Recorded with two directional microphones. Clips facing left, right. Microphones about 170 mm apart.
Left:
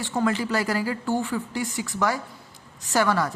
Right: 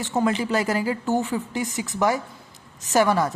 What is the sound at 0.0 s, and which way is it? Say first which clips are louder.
A woman's voice: right 2 dB; 20° right (ahead or behind).